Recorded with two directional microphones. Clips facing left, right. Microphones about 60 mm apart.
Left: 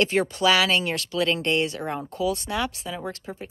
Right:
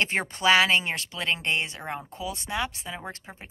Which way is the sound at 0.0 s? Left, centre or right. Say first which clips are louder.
Left 4 dB; right.